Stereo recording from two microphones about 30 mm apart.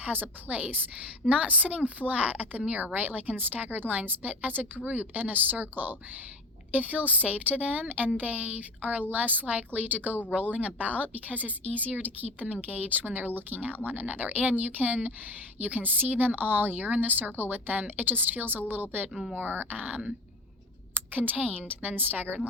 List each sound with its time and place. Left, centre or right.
0.0 s speech: right
1.3 s speech: right
2.6 s speech: right
2.8 s speech: right
3.7 s speech: right
6.7 s speech: right
10.5 s speech: right
12.6 s a woman's voice: right
19.1 s speech: centre
19.4 s speech: right
21.1 s speech: right